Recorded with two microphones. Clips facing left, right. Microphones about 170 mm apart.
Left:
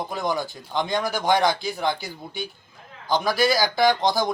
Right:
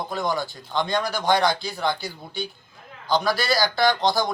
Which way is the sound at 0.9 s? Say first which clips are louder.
Even; 20° left (ahead or behind).